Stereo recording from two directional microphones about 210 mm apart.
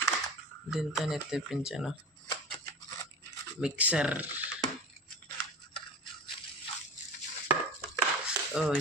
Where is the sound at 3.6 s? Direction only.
5° right (ahead or behind).